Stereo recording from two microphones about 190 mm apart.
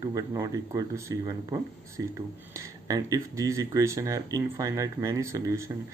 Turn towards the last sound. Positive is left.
turn(degrees=-15)  # may be behind; listen again after turning